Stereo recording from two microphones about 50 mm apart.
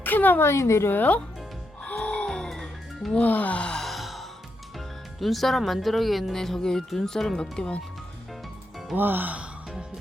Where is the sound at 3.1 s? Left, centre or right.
Left.